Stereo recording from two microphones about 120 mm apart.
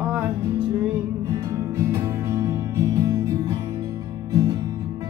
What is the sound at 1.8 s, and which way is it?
Music, 25° right (ahead or behind).